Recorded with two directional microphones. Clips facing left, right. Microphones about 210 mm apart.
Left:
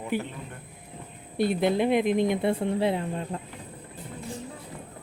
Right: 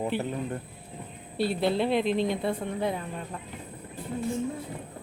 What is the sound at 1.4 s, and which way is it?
A woman's voice, 15° left (ahead or behind).